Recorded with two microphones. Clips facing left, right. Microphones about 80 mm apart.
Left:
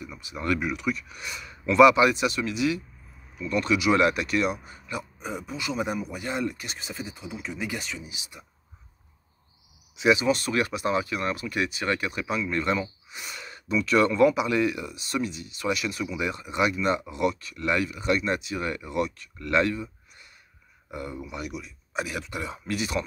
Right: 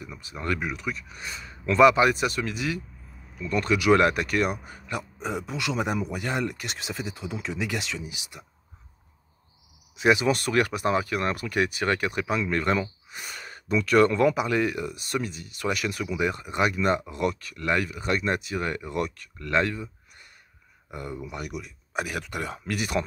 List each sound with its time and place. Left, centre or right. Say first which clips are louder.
0.2 s speech: left 2 dB; right
8.1 s speech: right 1 dB; right
9.9 s speech: even; right
13.1 s speech: right 1 dB; right